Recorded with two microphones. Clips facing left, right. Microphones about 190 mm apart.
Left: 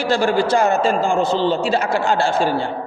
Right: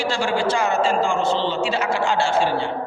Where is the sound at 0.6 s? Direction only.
40° left (ahead or behind).